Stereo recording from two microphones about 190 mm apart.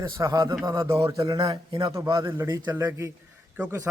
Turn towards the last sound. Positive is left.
turn(degrees=-10)  # may be behind; listen again after turning